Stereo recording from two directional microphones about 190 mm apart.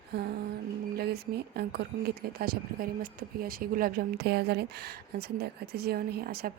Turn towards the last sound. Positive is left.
turn(degrees=-55)  # may be behind; listen again after turning